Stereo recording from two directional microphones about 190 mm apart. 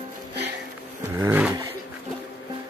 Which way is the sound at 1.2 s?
10° right (ahead or behind).